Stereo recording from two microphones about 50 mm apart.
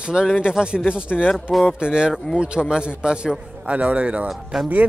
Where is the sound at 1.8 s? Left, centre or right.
Centre.